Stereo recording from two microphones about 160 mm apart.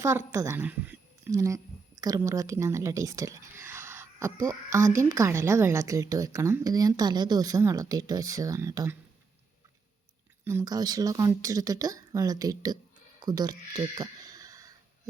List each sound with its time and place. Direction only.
0.0 s a woman's voice: 15° right (ahead or behind)
4.8 s a woman's voice: 50° right (ahead or behind)
5.0 s a woman's voice: 20° right (ahead or behind)
10.4 s speech: 20° right (ahead or behind)